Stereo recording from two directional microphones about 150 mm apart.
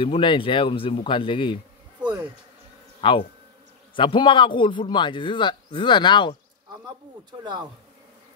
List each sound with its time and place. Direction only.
0.0 s a man's voice: 35° left (ahead or behind)
3.0 s a man's voice: 35° left (ahead or behind)
7.2 s speech: 30° right (ahead or behind)